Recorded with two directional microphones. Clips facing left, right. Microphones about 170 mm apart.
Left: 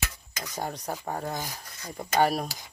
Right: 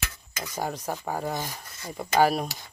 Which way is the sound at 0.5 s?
5° right (ahead or behind).